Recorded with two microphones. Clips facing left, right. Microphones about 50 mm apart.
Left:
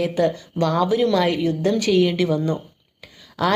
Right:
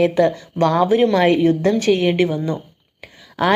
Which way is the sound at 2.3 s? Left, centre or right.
Right.